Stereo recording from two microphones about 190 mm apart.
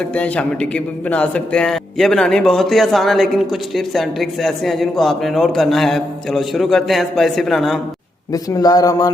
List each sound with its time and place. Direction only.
0.0 s speech: 5° left (ahead or behind)
8.3 s speech: 20° left (ahead or behind)